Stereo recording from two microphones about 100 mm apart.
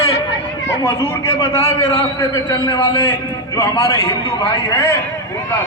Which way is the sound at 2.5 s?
55° left (ahead or behind).